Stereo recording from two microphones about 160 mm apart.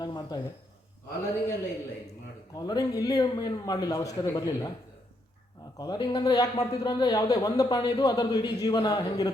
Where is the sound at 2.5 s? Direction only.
25° left (ahead or behind).